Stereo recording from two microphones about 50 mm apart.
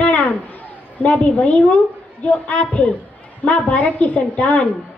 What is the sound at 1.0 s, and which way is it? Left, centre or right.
A woman's voice, left.